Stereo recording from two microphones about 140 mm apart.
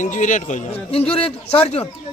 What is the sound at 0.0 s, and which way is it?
Speech, 65° left (ahead or behind).